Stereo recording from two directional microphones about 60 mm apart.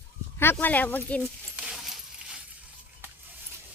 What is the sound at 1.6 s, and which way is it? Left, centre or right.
Keys jangling, centre.